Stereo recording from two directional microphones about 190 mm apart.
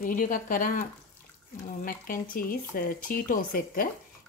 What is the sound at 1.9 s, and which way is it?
Speech, 45° left (ahead or behind).